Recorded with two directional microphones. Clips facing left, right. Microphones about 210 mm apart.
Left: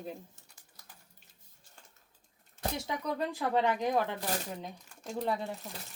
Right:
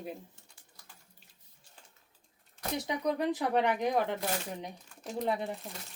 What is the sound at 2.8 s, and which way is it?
Speech, 15° right (ahead or behind).